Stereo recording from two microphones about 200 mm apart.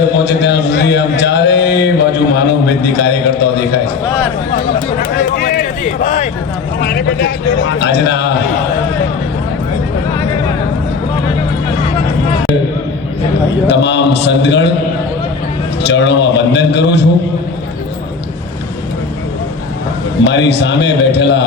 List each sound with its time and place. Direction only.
0.3 s a man's voice: 60° left (ahead or behind)
4.9 s a sound: 45° left (ahead or behind)
6.7 s speech: 50° left (ahead or behind)
7.6 s a man's voice: 65° left (ahead or behind)
13.7 s a man's voice: 60° left (ahead or behind)
15.8 s a man's voice: 60° left (ahead or behind)
20.2 s a man's voice: 60° left (ahead or behind)